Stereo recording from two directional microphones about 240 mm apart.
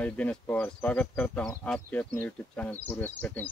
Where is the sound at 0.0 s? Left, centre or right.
Centre.